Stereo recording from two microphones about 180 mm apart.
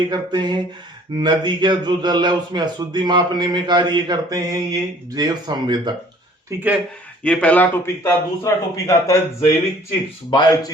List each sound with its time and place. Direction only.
0.1 s speech: 25° right (ahead or behind)
7.3 s a man's voice: 5° left (ahead or behind); by 10.7 s 25° left (ahead or behind)